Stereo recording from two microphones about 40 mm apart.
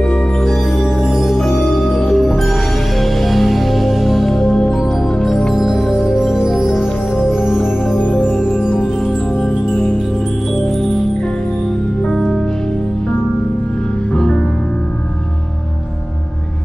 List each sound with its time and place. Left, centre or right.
0.4 s music: centre
0.8 s music: centre
1.4 s music: centre
5.5 s music: centre
8.0 s music: left
8.3 s music: centre
14.1 s music: centre